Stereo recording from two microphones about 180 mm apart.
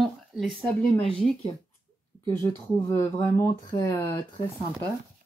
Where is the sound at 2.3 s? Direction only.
15° left (ahead or behind).